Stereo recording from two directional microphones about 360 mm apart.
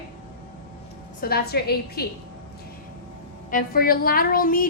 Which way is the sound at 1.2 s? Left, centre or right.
Left.